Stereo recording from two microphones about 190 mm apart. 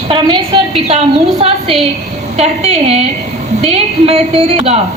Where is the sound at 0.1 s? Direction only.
25° right (ahead or behind).